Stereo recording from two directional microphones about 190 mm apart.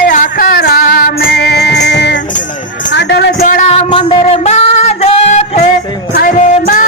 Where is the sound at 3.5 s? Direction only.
30° left (ahead or behind).